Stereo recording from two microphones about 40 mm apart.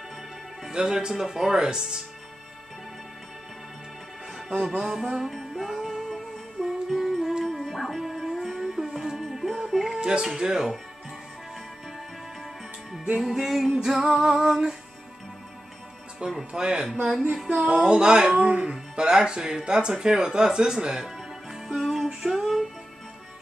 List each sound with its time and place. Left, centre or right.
0.7 s speech: centre
4.6 s speech: centre
5.3 s music: centre
9.9 s a sound: right
10.2 s speech: centre
13.2 s music: centre
13.7 s speech: centre
16.2 s speech: right
17.5 s music: right
17.8 s speech: right; by 22.7 s centre